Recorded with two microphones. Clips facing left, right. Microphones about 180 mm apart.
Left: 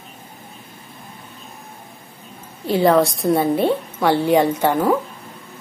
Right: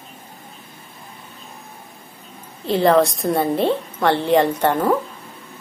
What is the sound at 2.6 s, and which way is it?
A woman's voice, centre (ahead or behind).